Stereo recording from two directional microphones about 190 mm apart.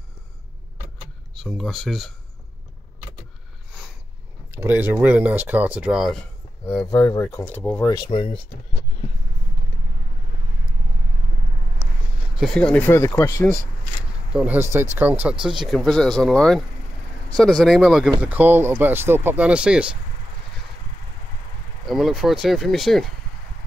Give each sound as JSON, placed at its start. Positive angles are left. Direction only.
{"t": 1.3, "sound": "speech", "side_deg": 0}
{"t": 4.5, "sound": "speech", "side_deg": -10}
{"t": 6.6, "sound": "speech", "side_deg": 15}
{"t": 7.9, "sound": "speech", "side_deg": 25}
{"t": 12.4, "sound": "speech", "side_deg": 5}
{"t": 14.3, "sound": "speech", "side_deg": -5}
{"t": 21.8, "sound": "speech", "side_deg": 0}